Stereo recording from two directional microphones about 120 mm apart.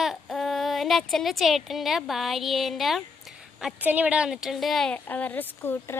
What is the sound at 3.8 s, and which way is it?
A woman's voice, 15° right (ahead or behind).